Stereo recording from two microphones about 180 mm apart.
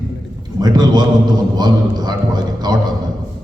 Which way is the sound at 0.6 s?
20° right (ahead or behind).